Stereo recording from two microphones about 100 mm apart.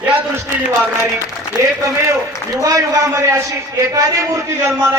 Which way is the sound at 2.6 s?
35° right (ahead or behind).